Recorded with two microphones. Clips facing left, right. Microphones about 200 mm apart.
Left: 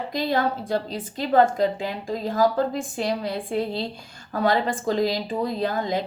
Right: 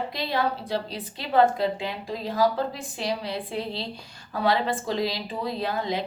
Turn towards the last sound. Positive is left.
turn(degrees=45)  # may be behind; listen again after turning